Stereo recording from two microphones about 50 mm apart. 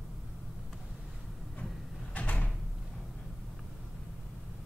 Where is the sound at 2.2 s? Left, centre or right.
Left.